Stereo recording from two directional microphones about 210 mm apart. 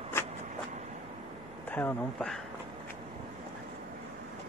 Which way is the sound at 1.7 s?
10° left (ahead or behind).